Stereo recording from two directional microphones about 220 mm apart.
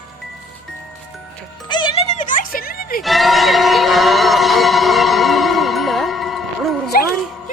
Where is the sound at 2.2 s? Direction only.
40° left (ahead or behind).